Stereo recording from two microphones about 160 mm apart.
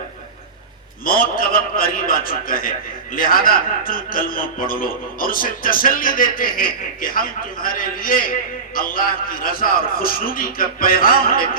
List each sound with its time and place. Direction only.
1.0 s a man's voice: 65° left (ahead or behind)